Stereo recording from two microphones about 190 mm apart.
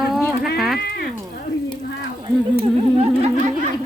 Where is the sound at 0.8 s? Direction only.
55° left (ahead or behind).